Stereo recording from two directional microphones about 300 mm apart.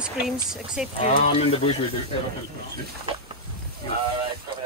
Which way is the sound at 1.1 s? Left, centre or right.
Left.